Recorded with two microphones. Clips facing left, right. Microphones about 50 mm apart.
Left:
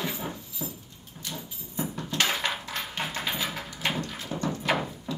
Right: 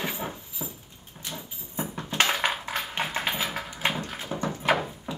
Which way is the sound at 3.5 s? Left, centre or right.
Right.